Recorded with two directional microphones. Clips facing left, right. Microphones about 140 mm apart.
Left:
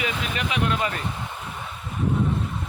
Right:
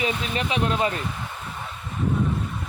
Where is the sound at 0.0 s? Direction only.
30° right (ahead or behind).